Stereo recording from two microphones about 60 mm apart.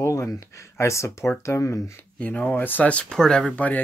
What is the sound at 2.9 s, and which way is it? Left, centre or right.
Speech, centre.